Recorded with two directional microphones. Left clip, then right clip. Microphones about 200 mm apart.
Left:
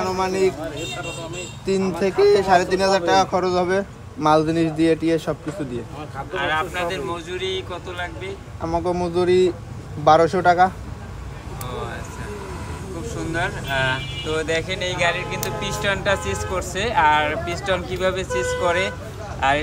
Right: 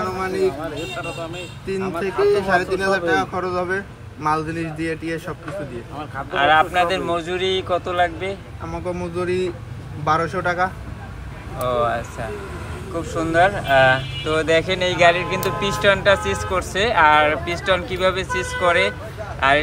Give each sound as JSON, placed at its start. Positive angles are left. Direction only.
{"t": 0.0, "sound": "a sound", "side_deg": 40}
{"t": 1.8, "sound": "a man's voice", "side_deg": 50}
{"t": 6.3, "sound": "speech", "side_deg": 0}
{"t": 8.6, "sound": "a man's voice", "side_deg": 45}
{"t": 13.0, "sound": "speech", "side_deg": 0}